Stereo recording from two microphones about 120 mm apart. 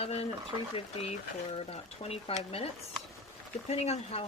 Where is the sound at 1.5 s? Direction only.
60° left (ahead or behind).